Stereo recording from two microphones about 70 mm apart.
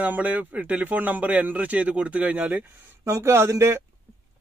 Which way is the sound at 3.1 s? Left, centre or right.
Right.